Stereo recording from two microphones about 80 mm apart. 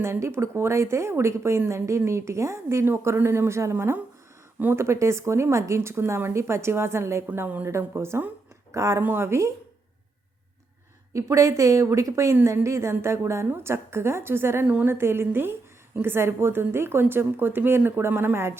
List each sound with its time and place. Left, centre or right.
0.0 s a woman's voice: right
7.3 s a woman's voice: right
11.1 s a woman's voice: right